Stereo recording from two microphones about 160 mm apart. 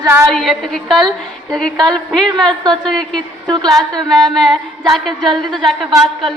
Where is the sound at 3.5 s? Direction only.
25° right (ahead or behind).